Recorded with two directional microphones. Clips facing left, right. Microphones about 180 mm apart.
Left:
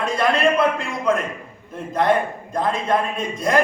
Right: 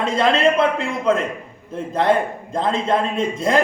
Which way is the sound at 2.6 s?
25° right (ahead or behind).